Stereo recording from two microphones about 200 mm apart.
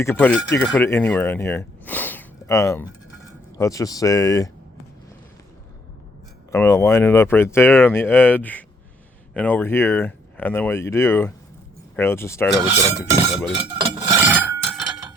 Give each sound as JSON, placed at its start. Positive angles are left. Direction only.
{"t": 0.0, "sound": "speech", "side_deg": 10}
{"t": 6.5, "sound": "speech", "side_deg": 15}
{"t": 13.3, "sound": "speech", "side_deg": -5}
{"t": 13.6, "sound": "a sound", "side_deg": -15}